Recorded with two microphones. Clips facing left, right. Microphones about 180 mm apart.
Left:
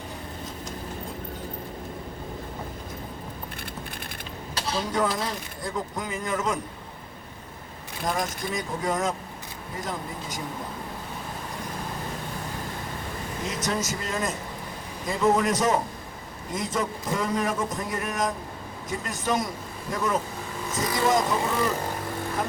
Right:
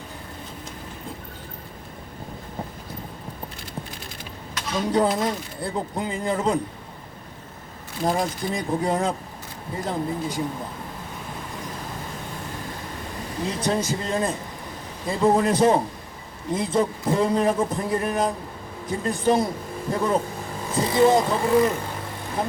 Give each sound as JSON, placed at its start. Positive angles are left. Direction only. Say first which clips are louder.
{"t": 4.5, "sound": "a sound", "louder": "right 2 dB", "side_deg": 35}
{"t": 5.6, "sound": "a man's voice", "louder": "right 4 dB", "side_deg": -30}
{"t": 8.0, "sound": "a man's voice", "louder": "right 5 dB", "side_deg": -30}
{"t": 13.5, "sound": "a man's voice", "louder": "right 5 dB", "side_deg": -30}